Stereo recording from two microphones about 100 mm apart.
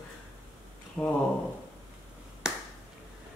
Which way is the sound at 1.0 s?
20° left (ahead or behind).